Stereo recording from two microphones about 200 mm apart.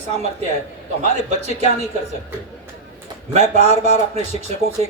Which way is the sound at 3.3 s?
35° right (ahead or behind).